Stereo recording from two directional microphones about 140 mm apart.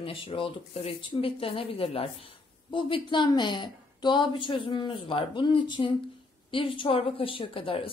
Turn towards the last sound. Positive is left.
turn(degrees=40)  # may be behind; listen again after turning